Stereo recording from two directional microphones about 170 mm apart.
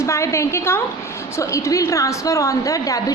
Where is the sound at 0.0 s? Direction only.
15° left (ahead or behind).